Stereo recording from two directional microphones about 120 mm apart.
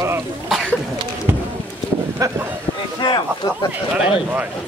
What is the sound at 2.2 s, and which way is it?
Speech, 30° right (ahead or behind).